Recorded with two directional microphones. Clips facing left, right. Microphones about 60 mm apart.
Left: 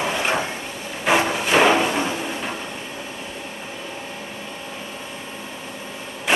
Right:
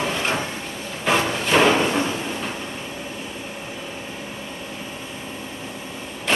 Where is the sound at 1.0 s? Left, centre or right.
Centre.